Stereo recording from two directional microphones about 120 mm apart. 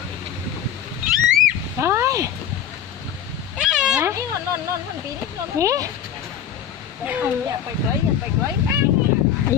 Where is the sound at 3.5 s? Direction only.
5° right (ahead or behind).